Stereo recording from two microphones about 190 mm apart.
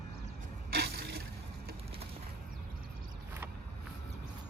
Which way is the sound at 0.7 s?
55° right (ahead or behind).